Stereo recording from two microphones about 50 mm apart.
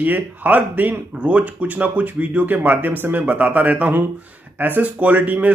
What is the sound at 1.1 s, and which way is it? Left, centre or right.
Speech, right.